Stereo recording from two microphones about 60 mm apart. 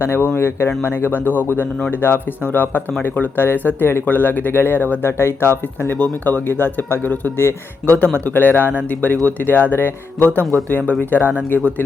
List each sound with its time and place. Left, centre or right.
0.0 s speech: left
7.9 s speech: right
8.2 s speech: left
11.2 s speech: centre